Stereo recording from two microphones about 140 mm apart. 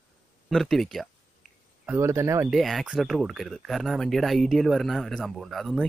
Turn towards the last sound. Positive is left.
turn(degrees=0)  # may be behind; listen again after turning